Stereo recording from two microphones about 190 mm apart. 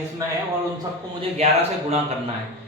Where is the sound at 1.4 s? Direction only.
35° right (ahead or behind).